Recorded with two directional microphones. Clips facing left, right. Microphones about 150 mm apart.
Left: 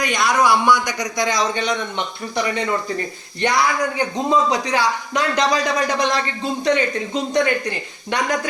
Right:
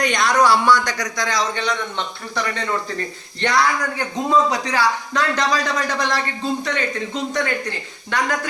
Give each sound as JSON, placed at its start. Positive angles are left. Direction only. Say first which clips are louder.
{"t": 0.0, "sound": "a man's voice", "louder": "right 1 dB", "side_deg": 5}